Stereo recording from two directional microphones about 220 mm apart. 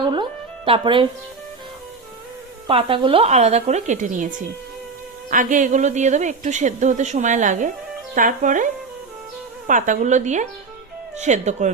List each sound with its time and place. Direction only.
0.1 s music: 25° right (ahead or behind)
2.6 s a woman's voice: 25° right (ahead or behind)
9.6 s a woman's voice: 35° right (ahead or behind)